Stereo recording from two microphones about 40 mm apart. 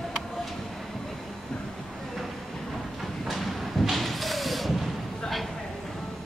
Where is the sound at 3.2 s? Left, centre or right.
Centre.